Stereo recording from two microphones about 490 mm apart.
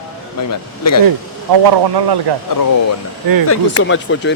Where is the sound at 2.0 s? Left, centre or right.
Right.